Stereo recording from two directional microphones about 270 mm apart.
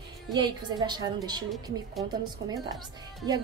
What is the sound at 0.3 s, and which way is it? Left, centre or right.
A woman's voice, centre.